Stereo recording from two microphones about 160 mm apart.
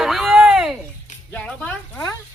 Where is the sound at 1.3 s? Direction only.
10° left (ahead or behind).